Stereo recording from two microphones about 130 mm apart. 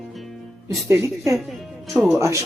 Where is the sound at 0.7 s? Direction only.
25° right (ahead or behind).